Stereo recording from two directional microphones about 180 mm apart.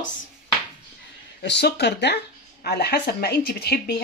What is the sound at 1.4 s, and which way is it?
Speech, 70° left (ahead or behind).